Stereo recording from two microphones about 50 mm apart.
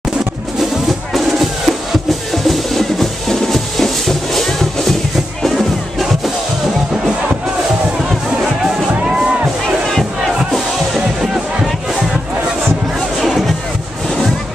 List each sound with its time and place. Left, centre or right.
0.6 s music: centre
9.0 s music: centre
9.8 s battle cry: centre